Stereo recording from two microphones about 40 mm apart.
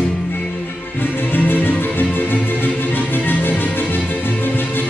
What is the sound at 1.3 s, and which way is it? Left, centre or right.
Music, left.